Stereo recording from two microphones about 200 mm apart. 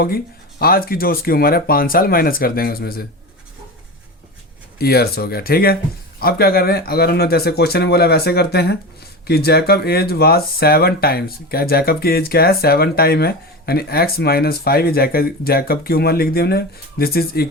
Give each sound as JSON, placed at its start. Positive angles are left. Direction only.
{"t": 0.6, "sound": "speech", "side_deg": 50}
{"t": 4.8, "sound": "speech", "side_deg": 50}